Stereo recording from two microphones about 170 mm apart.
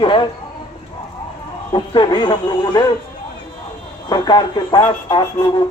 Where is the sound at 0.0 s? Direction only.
30° left (ahead or behind).